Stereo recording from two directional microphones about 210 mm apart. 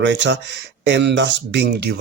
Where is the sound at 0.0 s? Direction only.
55° right (ahead or behind).